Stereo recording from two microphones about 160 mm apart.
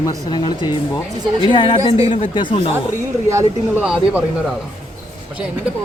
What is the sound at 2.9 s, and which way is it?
Speech, 20° right (ahead or behind).